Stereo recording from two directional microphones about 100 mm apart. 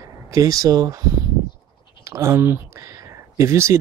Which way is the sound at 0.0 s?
35° right (ahead or behind).